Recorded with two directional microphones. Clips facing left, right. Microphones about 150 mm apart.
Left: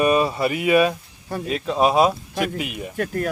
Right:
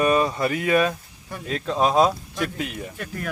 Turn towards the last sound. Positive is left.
turn(degrees=45)  # may be behind; listen again after turning